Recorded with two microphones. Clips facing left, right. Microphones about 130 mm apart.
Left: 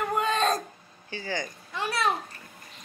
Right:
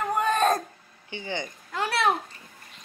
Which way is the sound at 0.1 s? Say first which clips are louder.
Right 4 dB; 50° right (ahead or behind).